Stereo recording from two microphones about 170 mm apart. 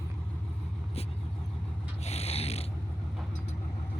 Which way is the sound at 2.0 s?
35° left (ahead or behind).